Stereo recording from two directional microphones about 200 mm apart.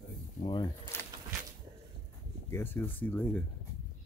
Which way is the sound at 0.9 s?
10° left (ahead or behind).